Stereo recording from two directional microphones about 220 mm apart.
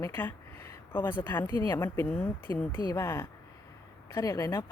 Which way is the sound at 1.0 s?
20° left (ahead or behind).